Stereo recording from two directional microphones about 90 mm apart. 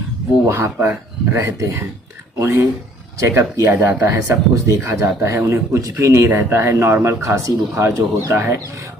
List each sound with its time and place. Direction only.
0.4 s speech: 30° right (ahead or behind)